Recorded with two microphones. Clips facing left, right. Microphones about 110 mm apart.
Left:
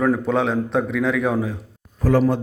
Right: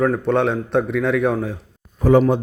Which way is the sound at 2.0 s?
20° right (ahead or behind).